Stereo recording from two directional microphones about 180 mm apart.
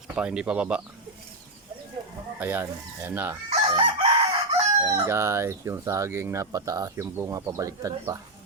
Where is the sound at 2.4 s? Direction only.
10° right (ahead or behind).